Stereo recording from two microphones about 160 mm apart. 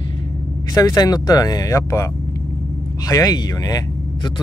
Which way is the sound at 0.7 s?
25° left (ahead or behind).